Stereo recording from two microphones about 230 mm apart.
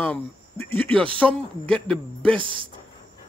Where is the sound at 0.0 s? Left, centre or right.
Centre.